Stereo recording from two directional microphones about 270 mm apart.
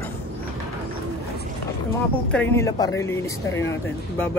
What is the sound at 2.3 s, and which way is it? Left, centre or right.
Speech, centre.